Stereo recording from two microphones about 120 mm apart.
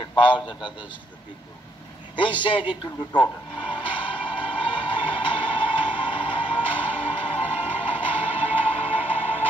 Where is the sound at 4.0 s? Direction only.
45° left (ahead or behind).